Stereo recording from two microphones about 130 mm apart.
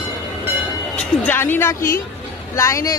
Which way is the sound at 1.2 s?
15° left (ahead or behind).